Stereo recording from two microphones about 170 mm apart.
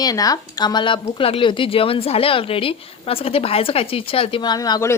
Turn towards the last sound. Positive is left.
turn(degrees=20)  # may be behind; listen again after turning